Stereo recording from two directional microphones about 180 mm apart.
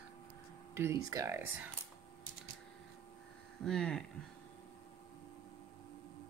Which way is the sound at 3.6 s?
5° left (ahead or behind).